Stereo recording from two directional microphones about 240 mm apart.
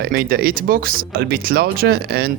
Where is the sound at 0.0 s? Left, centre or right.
Right.